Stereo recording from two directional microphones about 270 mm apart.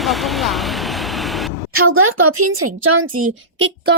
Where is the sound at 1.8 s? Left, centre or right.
Right.